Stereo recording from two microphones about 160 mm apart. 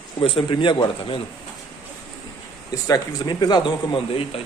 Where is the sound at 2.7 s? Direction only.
25° left (ahead or behind).